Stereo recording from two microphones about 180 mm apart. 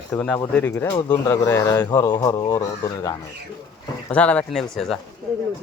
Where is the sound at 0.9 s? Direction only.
25° left (ahead or behind).